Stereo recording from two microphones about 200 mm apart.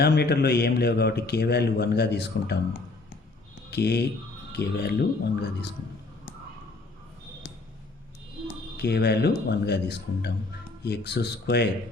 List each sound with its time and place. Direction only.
0.0 s a man's voice: 55° left (ahead or behind)
3.7 s speech: 55° left (ahead or behind)
8.8 s speech: 55° left (ahead or behind)